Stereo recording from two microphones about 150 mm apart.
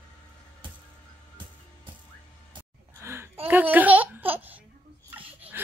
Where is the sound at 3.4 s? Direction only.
10° right (ahead or behind).